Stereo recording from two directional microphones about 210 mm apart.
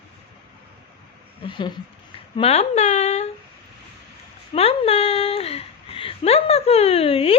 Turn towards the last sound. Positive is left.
turn(degrees=25)  # may be behind; listen again after turning